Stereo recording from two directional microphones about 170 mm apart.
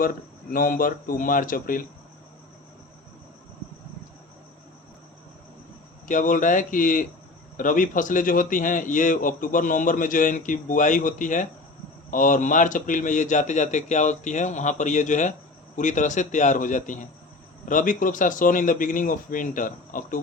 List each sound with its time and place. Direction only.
0.0 s speech: 55° left (ahead or behind)
6.1 s speech: 50° left (ahead or behind)